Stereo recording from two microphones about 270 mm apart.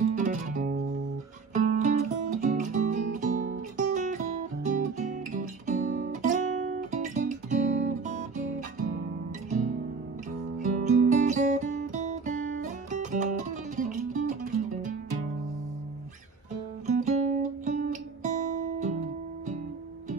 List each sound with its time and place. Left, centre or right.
0.1 s music: right
10.6 s music: right
16.8 s guitar: right